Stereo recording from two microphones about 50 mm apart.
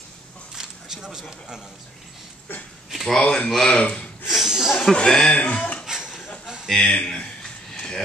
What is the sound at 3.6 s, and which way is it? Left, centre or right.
Speech, centre.